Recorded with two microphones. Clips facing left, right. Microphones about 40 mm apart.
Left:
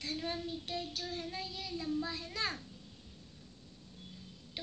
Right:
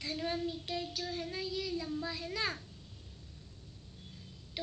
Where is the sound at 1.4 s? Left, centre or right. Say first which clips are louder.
Right 6 dB; left.